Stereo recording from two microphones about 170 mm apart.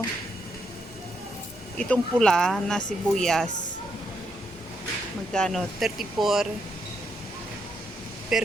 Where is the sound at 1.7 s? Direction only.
5° left (ahead or behind).